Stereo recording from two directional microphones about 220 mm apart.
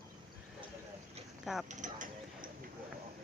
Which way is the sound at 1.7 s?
35° right (ahead or behind).